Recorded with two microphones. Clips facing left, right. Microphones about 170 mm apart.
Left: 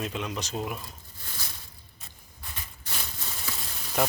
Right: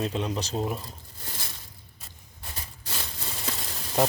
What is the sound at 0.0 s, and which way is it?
Speech, 35° right (ahead or behind).